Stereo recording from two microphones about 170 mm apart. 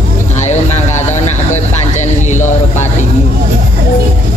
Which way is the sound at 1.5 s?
45° left (ahead or behind).